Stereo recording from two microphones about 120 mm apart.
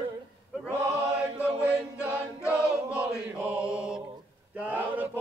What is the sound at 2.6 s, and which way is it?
Chant, 10° right (ahead or behind).